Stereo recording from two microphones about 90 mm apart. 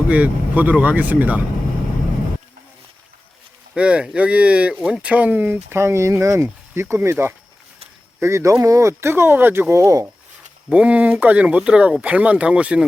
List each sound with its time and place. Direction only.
0.1 s speech: 15° right (ahead or behind)
3.8 s speech: 10° right (ahead or behind); by 10.1 s 35° right (ahead or behind)
10.7 s speech: 15° right (ahead or behind)